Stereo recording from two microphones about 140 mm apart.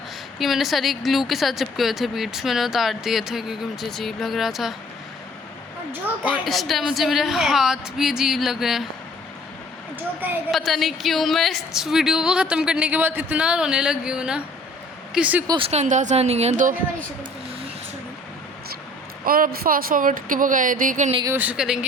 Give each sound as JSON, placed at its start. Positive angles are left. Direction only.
{"t": 0.3, "sound": "a woman's voice", "side_deg": 0}
{"t": 6.4, "sound": "a woman's voice", "side_deg": 0}
{"t": 10.5, "sound": "a woman's voice", "side_deg": 0}
{"t": 15.4, "sound": "speech", "side_deg": -40}
{"t": 19.2, "sound": "speech", "side_deg": -90}
{"t": 21.2, "sound": "speech", "side_deg": -10}